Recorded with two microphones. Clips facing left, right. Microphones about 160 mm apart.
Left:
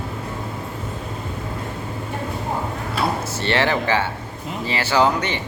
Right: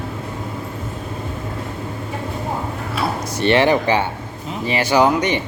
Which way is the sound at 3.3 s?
15° right (ahead or behind).